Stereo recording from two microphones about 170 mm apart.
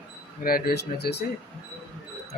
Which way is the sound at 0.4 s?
60° left (ahead or behind).